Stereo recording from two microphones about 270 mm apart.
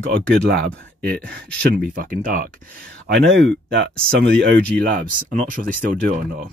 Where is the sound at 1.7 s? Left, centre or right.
Right.